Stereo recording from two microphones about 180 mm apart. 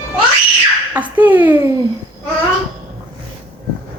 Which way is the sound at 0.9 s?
10° right (ahead or behind).